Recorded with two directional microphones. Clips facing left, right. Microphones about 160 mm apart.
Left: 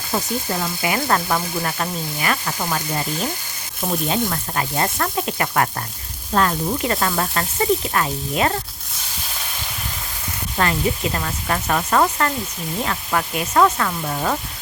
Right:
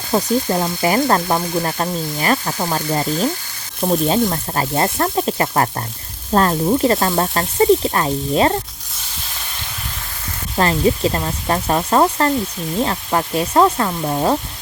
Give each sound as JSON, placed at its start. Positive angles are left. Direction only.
{"t": 0.1, "sound": "frying", "side_deg": -35}
{"t": 10.6, "sound": "sizzle", "side_deg": -30}